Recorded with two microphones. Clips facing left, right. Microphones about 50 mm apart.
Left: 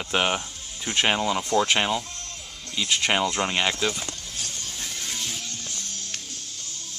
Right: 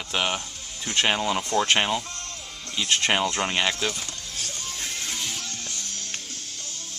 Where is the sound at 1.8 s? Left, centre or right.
Centre.